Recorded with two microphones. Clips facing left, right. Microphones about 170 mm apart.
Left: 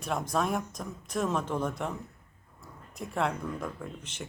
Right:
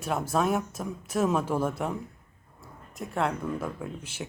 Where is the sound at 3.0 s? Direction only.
Centre (ahead or behind).